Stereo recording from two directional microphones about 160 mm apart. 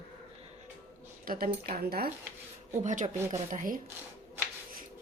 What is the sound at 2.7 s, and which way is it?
A woman's voice, 50° right (ahead or behind).